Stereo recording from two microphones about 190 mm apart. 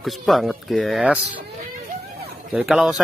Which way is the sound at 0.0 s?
Centre (ahead or behind).